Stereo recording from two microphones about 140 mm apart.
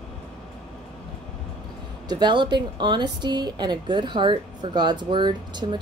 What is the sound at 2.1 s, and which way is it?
A woman's voice, 35° right (ahead or behind).